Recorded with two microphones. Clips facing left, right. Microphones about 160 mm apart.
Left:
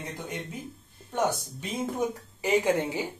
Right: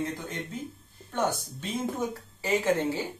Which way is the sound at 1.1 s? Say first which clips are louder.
Left 1 dB; 10° left (ahead or behind).